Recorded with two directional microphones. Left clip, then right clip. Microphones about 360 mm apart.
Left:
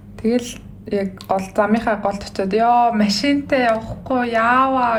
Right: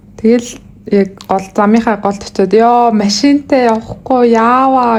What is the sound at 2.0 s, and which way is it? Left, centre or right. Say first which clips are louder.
A woman's voice: right 8 dB; centre.